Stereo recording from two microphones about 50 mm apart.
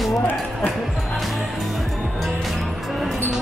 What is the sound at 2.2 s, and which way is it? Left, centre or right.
Music, centre.